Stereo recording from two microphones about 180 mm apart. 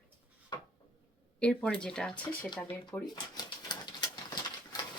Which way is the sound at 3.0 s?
20° left (ahead or behind).